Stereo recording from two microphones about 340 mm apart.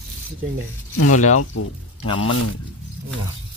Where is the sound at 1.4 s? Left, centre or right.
Left.